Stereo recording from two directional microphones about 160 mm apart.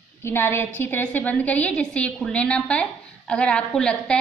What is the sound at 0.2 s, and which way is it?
A woman's voice, 15° left (ahead or behind).